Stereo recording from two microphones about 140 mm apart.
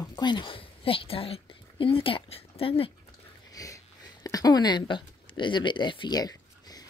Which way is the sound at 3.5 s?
25° left (ahead or behind).